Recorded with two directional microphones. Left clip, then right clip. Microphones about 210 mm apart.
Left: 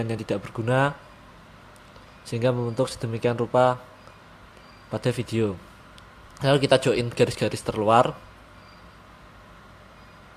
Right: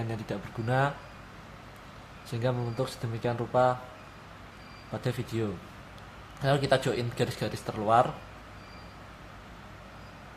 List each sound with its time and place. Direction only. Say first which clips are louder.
0.1 s speech: left 8 dB; 30° left (ahead or behind)
2.2 s speech: left 7 dB; 30° left (ahead or behind)
4.9 s speech: left 7 dB; 30° left (ahead or behind)